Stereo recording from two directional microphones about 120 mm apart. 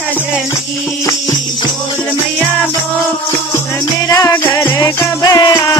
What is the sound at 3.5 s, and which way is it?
Music, 25° left (ahead or behind).